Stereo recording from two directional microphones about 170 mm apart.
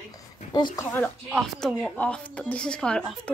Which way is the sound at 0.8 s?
10° left (ahead or behind).